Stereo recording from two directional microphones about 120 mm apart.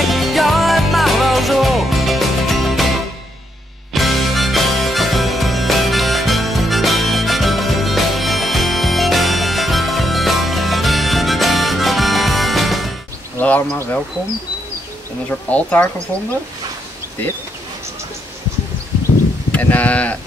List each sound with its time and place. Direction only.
0.0 s music: centre (ahead or behind)
3.9 s music: centre (ahead or behind)
13.4 s a sound: 15° left (ahead or behind)
15.2 s speech: 10° left (ahead or behind)
19.5 s speech: 10° left (ahead or behind)